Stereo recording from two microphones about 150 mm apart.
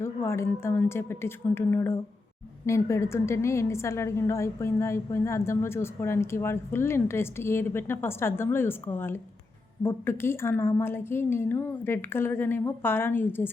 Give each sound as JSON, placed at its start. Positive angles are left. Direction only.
{"t": 0.0, "sound": "a woman's voice", "side_deg": 15}